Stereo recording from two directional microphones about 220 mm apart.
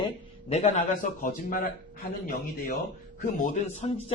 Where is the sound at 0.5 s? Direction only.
30° left (ahead or behind).